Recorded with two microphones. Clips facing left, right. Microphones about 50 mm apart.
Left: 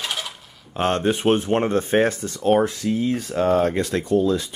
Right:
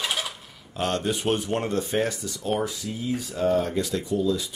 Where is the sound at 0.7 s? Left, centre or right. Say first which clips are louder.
Left 5 dB; left.